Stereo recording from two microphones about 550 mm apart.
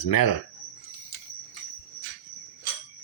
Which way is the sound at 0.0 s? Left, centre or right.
Left.